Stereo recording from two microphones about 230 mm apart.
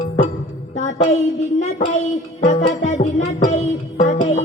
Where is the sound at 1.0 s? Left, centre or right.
Left.